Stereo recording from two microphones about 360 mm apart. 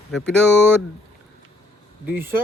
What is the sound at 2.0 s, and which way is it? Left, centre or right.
Speech, centre.